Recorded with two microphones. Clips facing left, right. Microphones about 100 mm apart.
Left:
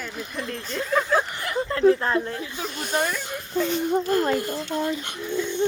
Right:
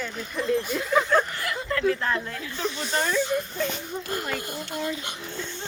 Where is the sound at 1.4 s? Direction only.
25° left (ahead or behind).